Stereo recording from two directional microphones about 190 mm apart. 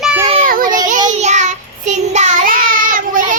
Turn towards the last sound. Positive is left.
turn(degrees=-45)  # may be behind; listen again after turning